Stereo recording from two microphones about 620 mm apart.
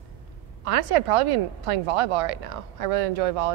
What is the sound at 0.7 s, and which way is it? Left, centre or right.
A woman's voice, right.